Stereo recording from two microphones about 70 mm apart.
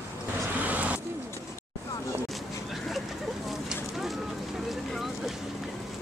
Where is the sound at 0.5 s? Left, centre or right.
Right.